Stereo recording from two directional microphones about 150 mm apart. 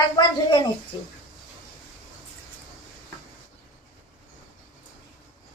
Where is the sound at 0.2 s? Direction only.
30° left (ahead or behind).